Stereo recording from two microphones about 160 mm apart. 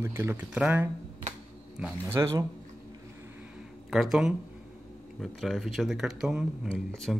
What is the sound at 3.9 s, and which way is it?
Speech, centre (ahead or behind).